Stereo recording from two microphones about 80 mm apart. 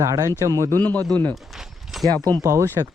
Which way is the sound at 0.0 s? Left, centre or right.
Right.